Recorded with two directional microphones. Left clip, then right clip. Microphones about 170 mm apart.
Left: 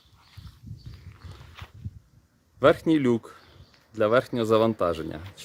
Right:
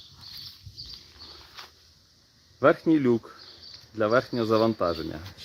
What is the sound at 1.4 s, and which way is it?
Walk, centre (ahead or behind).